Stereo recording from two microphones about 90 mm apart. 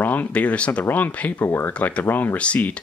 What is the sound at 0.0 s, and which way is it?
Speech, 20° left (ahead or behind).